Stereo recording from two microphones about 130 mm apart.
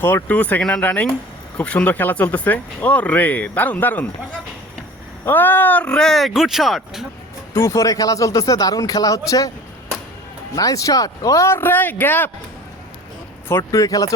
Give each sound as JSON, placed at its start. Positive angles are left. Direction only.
{"t": 0.0, "sound": "speech", "side_deg": 15}
{"t": 5.2, "sound": "speech", "side_deg": 15}
{"t": 7.5, "sound": "speech", "side_deg": 25}
{"t": 10.5, "sound": "speech", "side_deg": 25}
{"t": 13.6, "sound": "speech", "side_deg": 25}